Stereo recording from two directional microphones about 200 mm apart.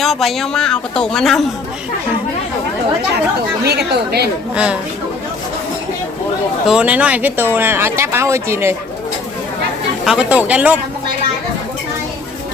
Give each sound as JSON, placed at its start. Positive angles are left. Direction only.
{"t": 0.0, "sound": "speech", "side_deg": 0}
{"t": 3.6, "sound": "a woman's voice", "side_deg": -55}
{"t": 4.5, "sound": "speech", "side_deg": -5}
{"t": 6.7, "sound": "speech", "side_deg": -5}
{"t": 10.0, "sound": "speech", "side_deg": -5}